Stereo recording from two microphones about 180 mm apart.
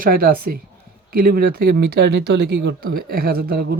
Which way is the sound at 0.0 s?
55° right (ahead or behind).